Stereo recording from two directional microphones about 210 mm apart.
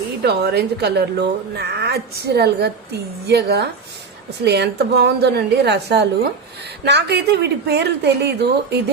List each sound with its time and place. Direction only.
0.2 s a woman's voice: 50° right (ahead or behind)